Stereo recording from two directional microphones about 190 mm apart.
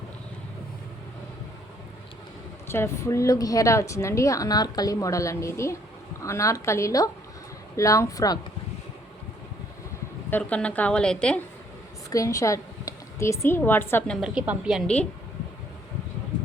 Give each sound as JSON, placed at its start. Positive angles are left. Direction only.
{"t": 2.6, "sound": "a woman's voice", "side_deg": 15}
{"t": 10.2, "sound": "a woman's voice", "side_deg": 10}
{"t": 12.1, "sound": "a woman's voice", "side_deg": 15}
{"t": 14.2, "sound": "a woman's voice", "side_deg": -5}